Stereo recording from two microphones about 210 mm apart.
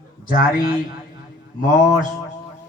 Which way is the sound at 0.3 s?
40° left (ahead or behind).